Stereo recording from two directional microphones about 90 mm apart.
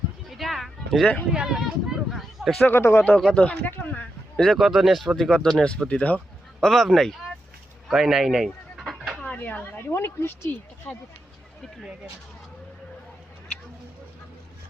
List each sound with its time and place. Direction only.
0.3 s a sound: centre (ahead or behind)
1.3 s speech: 5° right (ahead or behind)
2.0 s a sound: centre (ahead or behind)
2.6 s speech: 25° left (ahead or behind)
3.2 s speech: 5° left (ahead or behind)
4.4 s speech: centre (ahead or behind)
7.9 s chicken: 5° right (ahead or behind)
9.2 s a sound: 15° left (ahead or behind)
9.9 s speech: 30° left (ahead or behind)
10.9 s speech: 15° left (ahead or behind)